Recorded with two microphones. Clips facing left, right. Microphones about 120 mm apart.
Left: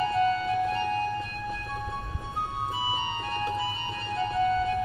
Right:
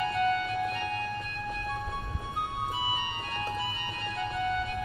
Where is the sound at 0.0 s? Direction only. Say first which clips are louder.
Left 3 dB; 30° left (ahead or behind).